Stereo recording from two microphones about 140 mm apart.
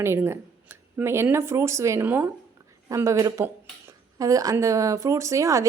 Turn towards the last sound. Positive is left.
turn(degrees=-20)  # may be behind; listen again after turning